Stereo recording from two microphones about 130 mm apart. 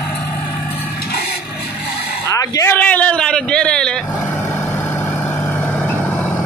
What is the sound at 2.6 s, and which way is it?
Roar, 10° left (ahead or behind).